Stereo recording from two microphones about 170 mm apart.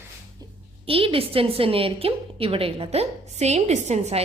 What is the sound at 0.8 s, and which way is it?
A woman's voice, 35° right (ahead or behind).